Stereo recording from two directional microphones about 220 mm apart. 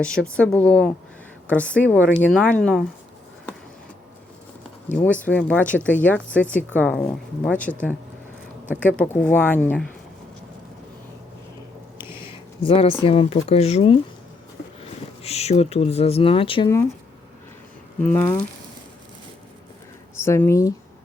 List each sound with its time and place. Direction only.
0.0 s speech: 5° left (ahead or behind)
4.9 s speech: 5° left (ahead or behind)
9.0 s speech: 5° left (ahead or behind)
11.9 s a sound: 10° right (ahead or behind)
12.5 s speech: 25° left (ahead or behind)
18.0 s speech: 10° left (ahead or behind)
20.2 s speech: 10° left (ahead or behind)